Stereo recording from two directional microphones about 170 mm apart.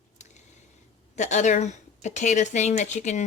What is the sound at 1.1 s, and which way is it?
Speech, 45° left (ahead or behind).